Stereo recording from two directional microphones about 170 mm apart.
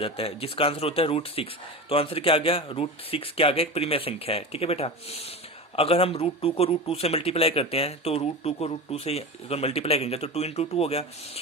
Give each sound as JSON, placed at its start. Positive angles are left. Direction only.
{"t": 0.0, "sound": "speech", "side_deg": 35}